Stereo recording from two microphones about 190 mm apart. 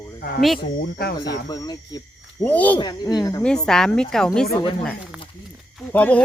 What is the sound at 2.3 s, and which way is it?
Speech, 10° left (ahead or behind).